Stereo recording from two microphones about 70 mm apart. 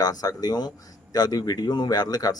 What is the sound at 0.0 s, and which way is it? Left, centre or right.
Speech, left.